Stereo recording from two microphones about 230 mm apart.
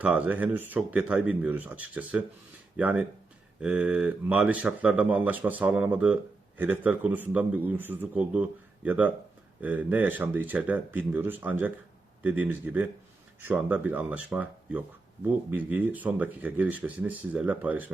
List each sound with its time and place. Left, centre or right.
0.0 s speech: centre